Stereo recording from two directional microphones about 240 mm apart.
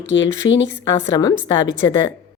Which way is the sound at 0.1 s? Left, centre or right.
Left.